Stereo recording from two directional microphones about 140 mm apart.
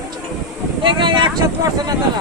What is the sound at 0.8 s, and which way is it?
Speech, 35° right (ahead or behind).